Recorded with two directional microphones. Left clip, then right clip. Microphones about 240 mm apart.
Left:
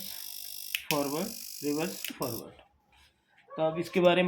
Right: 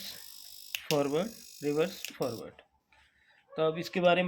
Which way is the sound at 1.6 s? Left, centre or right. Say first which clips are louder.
Right 3 dB; right.